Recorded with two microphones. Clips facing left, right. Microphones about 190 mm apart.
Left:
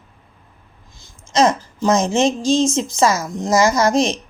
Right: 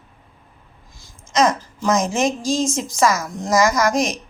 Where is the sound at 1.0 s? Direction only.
25° left (ahead or behind).